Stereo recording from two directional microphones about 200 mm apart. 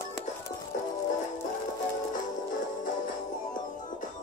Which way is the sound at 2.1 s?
40° left (ahead or behind).